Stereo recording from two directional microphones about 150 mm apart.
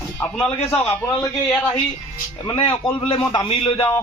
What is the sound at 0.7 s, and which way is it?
Speech, 5° left (ahead or behind).